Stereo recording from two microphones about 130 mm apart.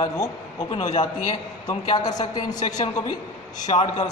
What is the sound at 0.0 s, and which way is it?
A man's voice, 40° left (ahead or behind).